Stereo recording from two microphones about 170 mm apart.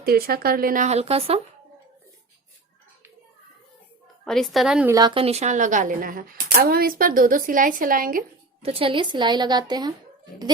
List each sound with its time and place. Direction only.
0.0 s speech: 60° right (ahead or behind); by 1.4 s 35° right (ahead or behind)
4.3 s a woman's voice: centre (ahead or behind)
4.9 s a woman's voice: 25° right (ahead or behind); by 8.2 s 55° right (ahead or behind)
8.6 s a woman's voice: 35° right (ahead or behind)